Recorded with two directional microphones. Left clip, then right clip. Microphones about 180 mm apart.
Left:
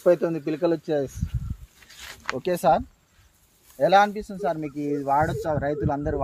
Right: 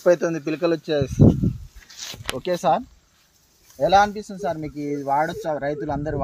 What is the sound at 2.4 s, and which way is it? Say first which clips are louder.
Speech: even; 25° left (ahead or behind).